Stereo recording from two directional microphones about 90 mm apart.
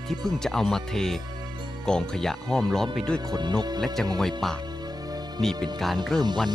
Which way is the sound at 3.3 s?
55° right (ahead or behind).